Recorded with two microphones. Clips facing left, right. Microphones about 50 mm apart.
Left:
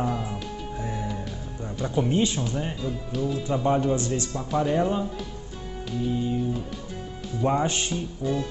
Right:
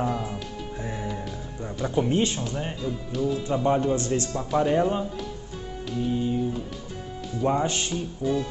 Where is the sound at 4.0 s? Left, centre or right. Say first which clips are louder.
Right 2 dB; right.